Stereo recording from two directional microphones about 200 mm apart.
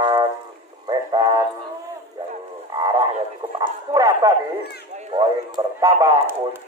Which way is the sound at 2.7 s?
20° right (ahead or behind).